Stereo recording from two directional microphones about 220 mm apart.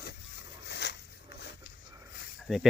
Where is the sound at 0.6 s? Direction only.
50° left (ahead or behind).